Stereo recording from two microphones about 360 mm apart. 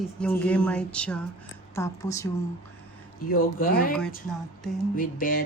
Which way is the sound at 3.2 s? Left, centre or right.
Left.